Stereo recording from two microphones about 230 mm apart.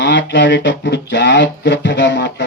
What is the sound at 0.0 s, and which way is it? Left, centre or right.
Speech, left.